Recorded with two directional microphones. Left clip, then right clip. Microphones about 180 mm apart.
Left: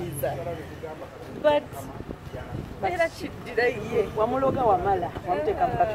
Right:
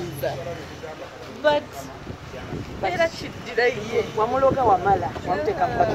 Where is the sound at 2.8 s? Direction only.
30° left (ahead or behind).